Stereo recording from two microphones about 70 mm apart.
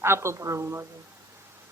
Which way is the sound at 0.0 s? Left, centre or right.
Right.